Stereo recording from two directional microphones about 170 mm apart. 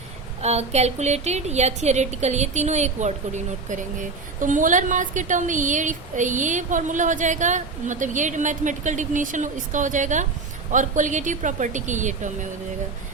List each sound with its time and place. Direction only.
0.4 s a woman's voice: 40° right (ahead or behind)